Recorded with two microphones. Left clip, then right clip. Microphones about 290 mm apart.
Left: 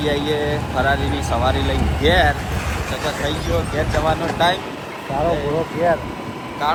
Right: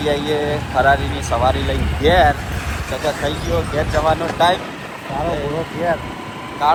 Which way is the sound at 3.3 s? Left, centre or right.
Centre.